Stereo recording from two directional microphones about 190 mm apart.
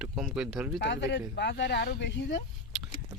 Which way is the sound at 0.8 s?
70° left (ahead or behind).